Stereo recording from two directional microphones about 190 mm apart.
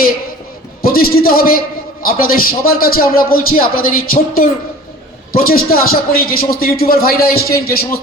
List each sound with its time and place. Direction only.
0.8 s a man's voice: 50° left (ahead or behind)
5.5 s a man's voice: 50° left (ahead or behind)